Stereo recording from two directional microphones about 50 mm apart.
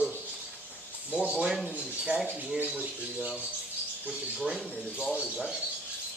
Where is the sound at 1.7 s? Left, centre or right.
Right.